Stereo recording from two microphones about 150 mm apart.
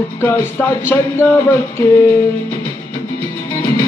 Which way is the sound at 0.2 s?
15° left (ahead or behind).